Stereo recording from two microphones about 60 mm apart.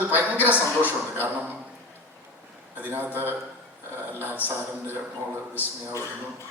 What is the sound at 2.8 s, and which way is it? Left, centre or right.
Speech, right.